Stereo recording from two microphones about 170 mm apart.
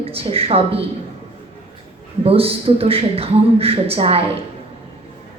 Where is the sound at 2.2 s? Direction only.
35° right (ahead or behind).